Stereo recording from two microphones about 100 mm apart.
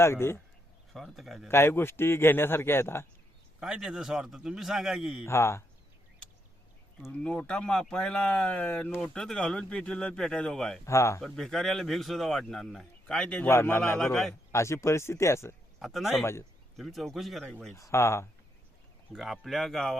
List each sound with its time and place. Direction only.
0.0 s a man's voice: 25° left (ahead or behind)
0.9 s speech: centre (ahead or behind)
1.5 s a man's voice: 25° left (ahead or behind)
3.6 s speech: 5° right (ahead or behind)
5.2 s a man's voice: 25° left (ahead or behind)
7.2 s speech: 10° left (ahead or behind)
10.8 s a man's voice: 30° left (ahead or behind)
11.2 s speech: 5° left (ahead or behind)
13.5 s a man's voice: 25° left (ahead or behind)
14.0 s speech: 5° left (ahead or behind)
14.5 s a man's voice: 30° left (ahead or behind)
15.8 s speech: centre (ahead or behind)
17.7 s a man's voice: 30° left (ahead or behind)
19.1 s speech: centre (ahead or behind)